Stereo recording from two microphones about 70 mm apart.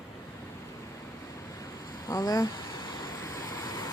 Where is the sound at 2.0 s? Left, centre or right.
Left.